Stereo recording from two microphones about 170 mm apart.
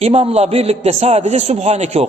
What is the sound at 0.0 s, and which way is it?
A man's voice, 35° right (ahead or behind).